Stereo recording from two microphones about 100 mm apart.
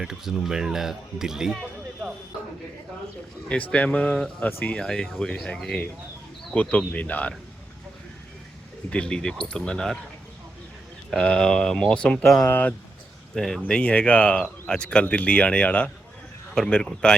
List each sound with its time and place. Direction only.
0.0 s speech: 5° right (ahead or behind)
3.5 s speech: 15° left (ahead or behind)
8.9 s speech: 10° left (ahead or behind)
11.2 s speech: 10° left (ahead or behind)
12.5 s speech: 20° left (ahead or behind)
13.3 s speech: 5° left (ahead or behind)